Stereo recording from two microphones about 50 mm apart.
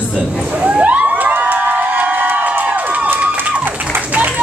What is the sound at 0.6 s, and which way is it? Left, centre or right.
Crowd, right.